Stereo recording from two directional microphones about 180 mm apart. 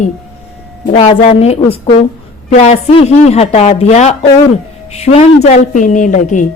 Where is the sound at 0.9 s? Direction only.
35° left (ahead or behind).